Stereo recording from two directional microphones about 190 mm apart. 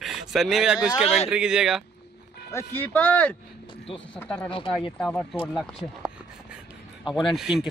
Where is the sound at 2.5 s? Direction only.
10° left (ahead or behind).